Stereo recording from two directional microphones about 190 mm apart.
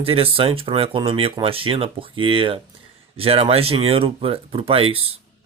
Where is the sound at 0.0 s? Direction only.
30° right (ahead or behind).